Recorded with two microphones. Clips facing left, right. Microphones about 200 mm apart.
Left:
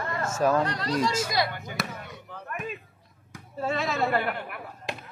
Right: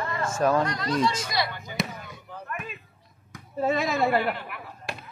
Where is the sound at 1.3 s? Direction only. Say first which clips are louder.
Left 1 dB; 50° left (ahead or behind).